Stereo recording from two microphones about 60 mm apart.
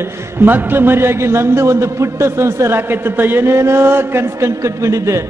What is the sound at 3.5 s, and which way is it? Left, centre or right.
Speech, right.